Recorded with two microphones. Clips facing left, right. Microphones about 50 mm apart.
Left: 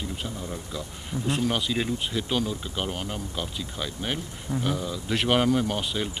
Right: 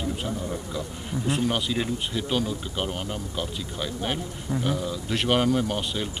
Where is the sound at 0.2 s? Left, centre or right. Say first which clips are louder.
Right 4 dB; centre.